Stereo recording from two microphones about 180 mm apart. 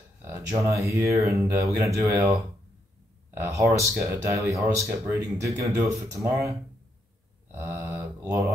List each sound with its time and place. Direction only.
0.2 s speech: 15° right (ahead or behind)
3.4 s speech: 15° right (ahead or behind)
7.5 s speech: 15° right (ahead or behind)